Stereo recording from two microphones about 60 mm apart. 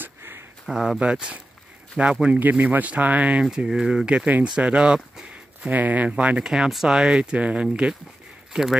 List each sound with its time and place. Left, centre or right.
0.0 s a sound: right
0.7 s speech: centre
2.3 s speech: right
3.4 s speech: centre
5.7 s speech: right
6.4 s speech: centre